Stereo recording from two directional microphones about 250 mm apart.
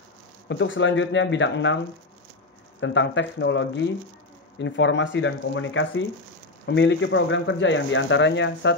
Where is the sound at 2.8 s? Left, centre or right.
Left.